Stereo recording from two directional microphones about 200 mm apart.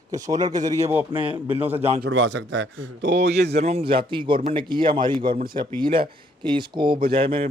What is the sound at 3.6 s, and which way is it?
A man's voice, 30° right (ahead or behind).